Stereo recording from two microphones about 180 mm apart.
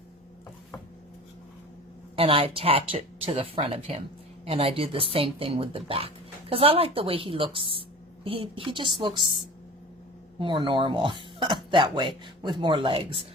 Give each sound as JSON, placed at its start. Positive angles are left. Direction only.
{"t": 2.1, "sound": "a woman's voice", "side_deg": -30}
{"t": 10.4, "sound": "a woman's voice", "side_deg": -25}